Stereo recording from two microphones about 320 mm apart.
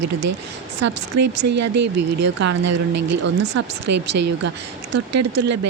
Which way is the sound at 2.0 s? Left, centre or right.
Right.